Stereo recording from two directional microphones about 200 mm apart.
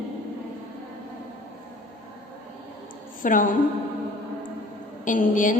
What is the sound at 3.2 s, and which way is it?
Speech, 40° left (ahead or behind).